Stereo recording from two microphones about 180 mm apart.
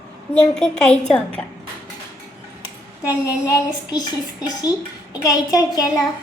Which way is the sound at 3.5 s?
20° left (ahead or behind).